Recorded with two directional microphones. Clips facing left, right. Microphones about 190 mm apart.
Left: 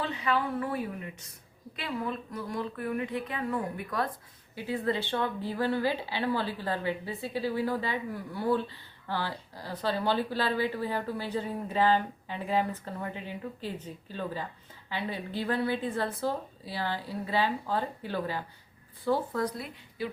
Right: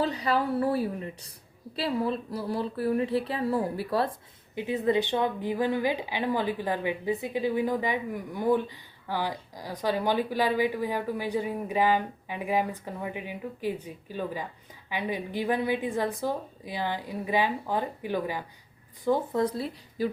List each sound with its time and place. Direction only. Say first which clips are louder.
0.0 s speech: right 3 dB; 40° right (ahead or behind)
4.5 s a woman's voice: right 5 dB; 20° right (ahead or behind)